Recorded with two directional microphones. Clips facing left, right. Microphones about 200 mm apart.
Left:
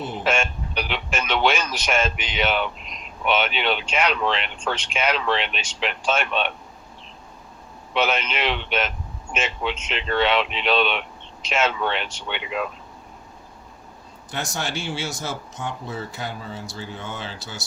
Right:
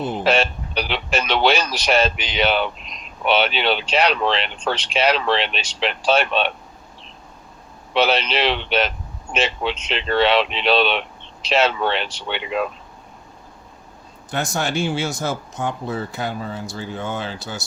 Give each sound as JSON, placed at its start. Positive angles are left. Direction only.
{"t": 0.3, "sound": "speech", "side_deg": -35}
{"t": 7.9, "sound": "speech", "side_deg": -35}
{"t": 14.3, "sound": "speech", "side_deg": -50}